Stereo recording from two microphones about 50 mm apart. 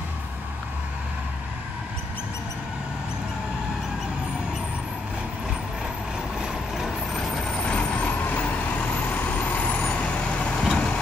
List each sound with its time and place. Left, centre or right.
7.2 s vehicle: centre
7.6 s vehicle: left
10.6 s vehicle: centre